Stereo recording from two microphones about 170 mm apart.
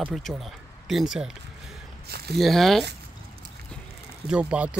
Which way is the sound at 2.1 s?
70° right (ahead or behind).